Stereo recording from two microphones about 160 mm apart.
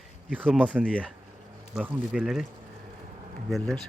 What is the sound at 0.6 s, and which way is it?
Speech, 10° right (ahead or behind).